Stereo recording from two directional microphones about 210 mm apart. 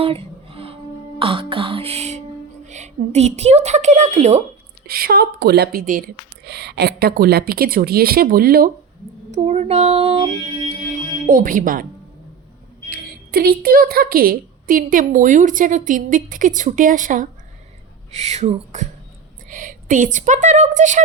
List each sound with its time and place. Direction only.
0.0 s music: 25° right (ahead or behind)
1.2 s throat clearing: 25° right (ahead or behind)
2.6 s a woman's voice: 35° right (ahead or behind)
4.9 s speech: 45° right (ahead or behind)
9.3 s a woman's voice: 30° right (ahead or behind)
11.3 s a woman's voice: 40° right (ahead or behind)
12.9 s a woman's voice: 45° right (ahead or behind)